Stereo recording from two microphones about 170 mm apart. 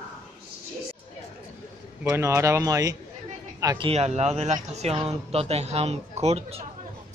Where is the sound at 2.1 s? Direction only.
15° right (ahead or behind).